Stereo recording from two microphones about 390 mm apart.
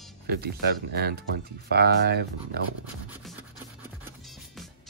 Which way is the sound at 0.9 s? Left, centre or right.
Right.